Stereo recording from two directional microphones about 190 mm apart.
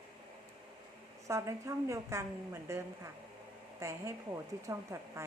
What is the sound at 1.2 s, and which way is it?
Speech, 15° right (ahead or behind).